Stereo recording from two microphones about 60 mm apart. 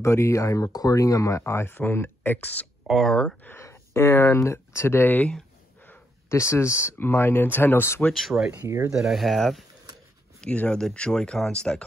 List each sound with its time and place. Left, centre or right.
0.0 s speech: left
1.4 s speech: left
2.9 s speech: centre
3.4 s speech: left
6.2 s speech: left
7.0 s speech: left
8.1 s speech: centre
8.6 s speech: right
8.9 s speech: centre
10.4 s speech: centre